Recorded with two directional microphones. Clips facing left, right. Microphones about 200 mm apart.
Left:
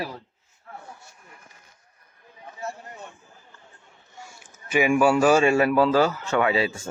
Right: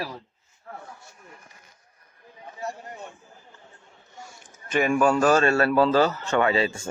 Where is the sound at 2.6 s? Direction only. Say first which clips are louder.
Right 1 dB; 15° right (ahead or behind).